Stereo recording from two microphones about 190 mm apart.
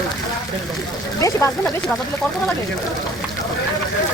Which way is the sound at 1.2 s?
15° left (ahead or behind).